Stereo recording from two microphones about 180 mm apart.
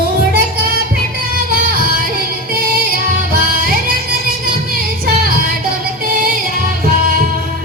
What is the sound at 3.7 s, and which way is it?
Music, 55° right (ahead or behind).